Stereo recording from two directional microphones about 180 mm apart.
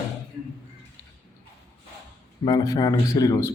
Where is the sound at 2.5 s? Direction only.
20° left (ahead or behind).